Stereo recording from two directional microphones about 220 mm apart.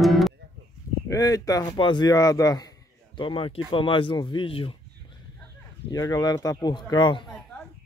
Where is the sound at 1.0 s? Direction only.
15° left (ahead or behind).